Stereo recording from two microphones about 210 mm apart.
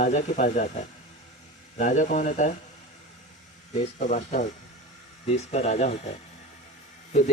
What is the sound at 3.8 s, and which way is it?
Speech, 35° left (ahead or behind).